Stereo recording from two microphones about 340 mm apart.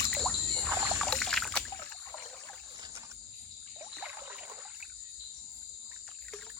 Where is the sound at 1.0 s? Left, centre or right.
Centre.